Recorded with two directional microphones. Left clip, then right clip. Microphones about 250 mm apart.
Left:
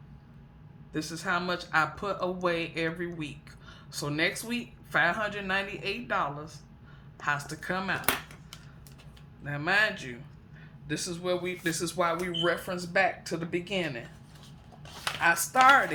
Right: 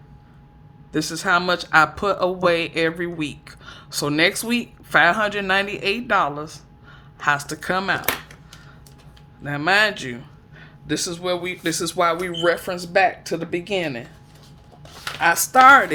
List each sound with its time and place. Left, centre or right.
0.9 s speech: right
9.4 s a man's voice: right
15.2 s a man's voice: right